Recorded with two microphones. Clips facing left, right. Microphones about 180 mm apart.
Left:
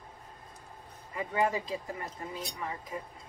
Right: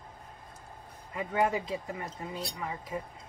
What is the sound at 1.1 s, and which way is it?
Speech, 20° right (ahead or behind).